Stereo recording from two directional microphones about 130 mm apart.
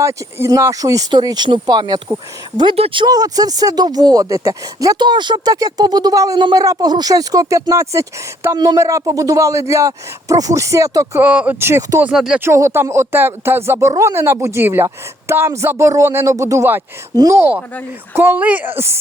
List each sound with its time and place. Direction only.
0.0 s speech: 20° right (ahead or behind)
2.6 s speech: 45° right (ahead or behind); by 11.2 s 25° right (ahead or behind)
11.2 s speech: 10° right (ahead or behind)
12.0 s speech: 5° right (ahead or behind)
12.4 s speech: 20° right (ahead or behind)